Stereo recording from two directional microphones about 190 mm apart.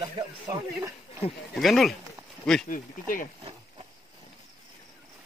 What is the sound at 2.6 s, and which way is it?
Speech, 45° left (ahead or behind).